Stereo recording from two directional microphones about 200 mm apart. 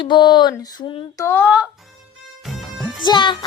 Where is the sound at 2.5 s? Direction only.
Centre (ahead or behind).